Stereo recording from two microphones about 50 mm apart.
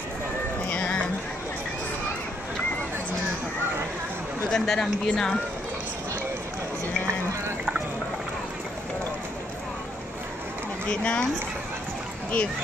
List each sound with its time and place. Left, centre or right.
0.7 s music: left
4.5 s speech: centre
10.9 s speech: left